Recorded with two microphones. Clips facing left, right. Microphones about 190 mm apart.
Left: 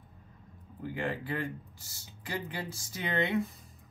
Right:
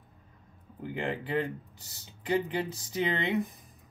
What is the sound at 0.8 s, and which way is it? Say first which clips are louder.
Speech: right 1 dB; 25° right (ahead or behind).